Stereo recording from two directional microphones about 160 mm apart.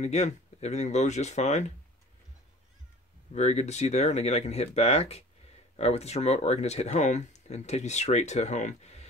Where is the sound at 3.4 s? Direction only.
45° left (ahead or behind).